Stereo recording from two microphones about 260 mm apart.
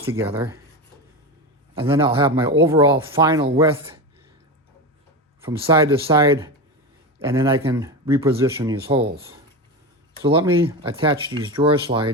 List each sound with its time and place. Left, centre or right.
0.2 s speech: centre
1.8 s speech: centre
5.4 s speech: centre
10.2 s speech: centre